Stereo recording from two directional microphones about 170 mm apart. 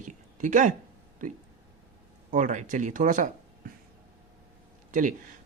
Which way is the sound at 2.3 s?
50° right (ahead or behind).